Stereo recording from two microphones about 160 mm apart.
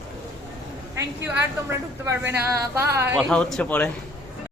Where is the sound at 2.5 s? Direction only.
15° right (ahead or behind).